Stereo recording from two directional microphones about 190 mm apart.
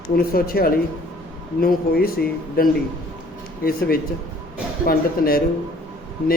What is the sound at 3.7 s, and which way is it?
A man's voice, 55° left (ahead or behind).